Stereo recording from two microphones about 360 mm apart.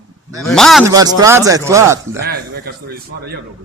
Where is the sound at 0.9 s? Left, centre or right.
Centre.